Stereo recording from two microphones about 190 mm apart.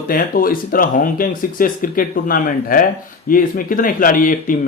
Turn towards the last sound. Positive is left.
turn(degrees=45)  # may be behind; listen again after turning